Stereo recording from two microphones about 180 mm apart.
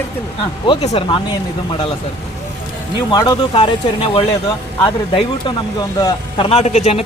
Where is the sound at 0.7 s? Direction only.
30° left (ahead or behind).